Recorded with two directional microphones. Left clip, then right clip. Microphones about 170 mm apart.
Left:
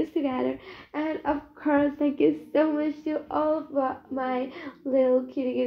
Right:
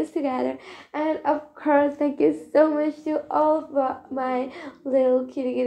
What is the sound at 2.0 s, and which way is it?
Speech, 5° right (ahead or behind).